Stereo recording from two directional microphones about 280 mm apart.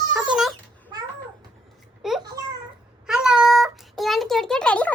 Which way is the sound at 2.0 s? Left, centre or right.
Centre.